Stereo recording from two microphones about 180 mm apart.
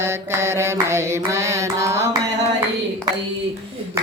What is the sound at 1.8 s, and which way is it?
Carnatic music, 15° right (ahead or behind).